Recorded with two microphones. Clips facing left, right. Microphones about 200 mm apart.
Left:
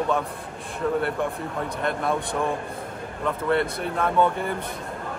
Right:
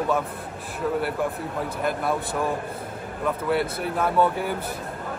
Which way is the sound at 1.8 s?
5° right (ahead or behind).